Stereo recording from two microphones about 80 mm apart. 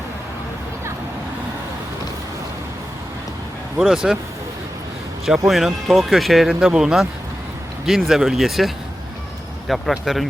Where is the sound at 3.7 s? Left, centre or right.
Centre.